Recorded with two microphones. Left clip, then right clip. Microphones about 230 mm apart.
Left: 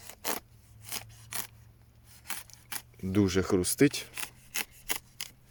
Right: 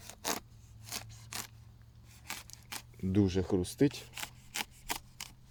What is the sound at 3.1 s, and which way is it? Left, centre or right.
Speech, left.